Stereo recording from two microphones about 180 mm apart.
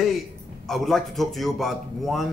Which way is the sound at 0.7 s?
Centre (ahead or behind).